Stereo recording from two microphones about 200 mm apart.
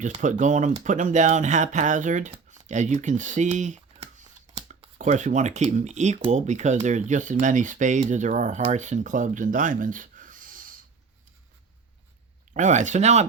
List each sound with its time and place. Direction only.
0.0 s speech: 40° right (ahead or behind)
12.5 s speech: 40° right (ahead or behind)